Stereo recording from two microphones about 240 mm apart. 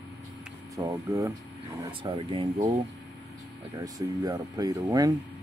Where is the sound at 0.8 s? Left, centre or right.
Centre.